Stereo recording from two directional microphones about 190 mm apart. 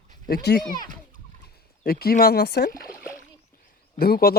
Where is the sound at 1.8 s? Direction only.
55° left (ahead or behind).